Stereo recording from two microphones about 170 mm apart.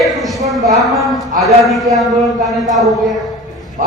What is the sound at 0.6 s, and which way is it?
Speech, 20° right (ahead or behind).